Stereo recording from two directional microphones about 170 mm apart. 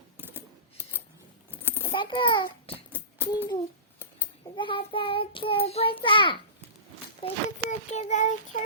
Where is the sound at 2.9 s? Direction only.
10° right (ahead or behind).